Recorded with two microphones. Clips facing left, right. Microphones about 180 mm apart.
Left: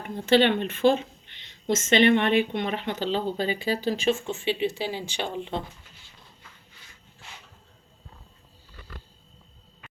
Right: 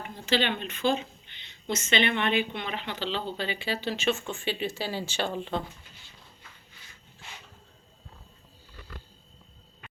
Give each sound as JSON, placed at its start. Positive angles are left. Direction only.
{"t": 0.0, "sound": "speech", "side_deg": 50}